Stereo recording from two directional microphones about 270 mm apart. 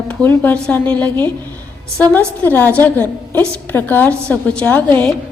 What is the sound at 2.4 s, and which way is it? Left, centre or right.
A woman's voice, centre.